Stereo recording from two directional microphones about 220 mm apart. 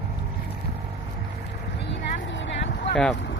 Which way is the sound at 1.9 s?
55° left (ahead or behind).